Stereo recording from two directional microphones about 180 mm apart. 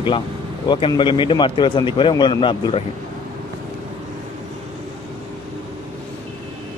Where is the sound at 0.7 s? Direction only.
25° left (ahead or behind).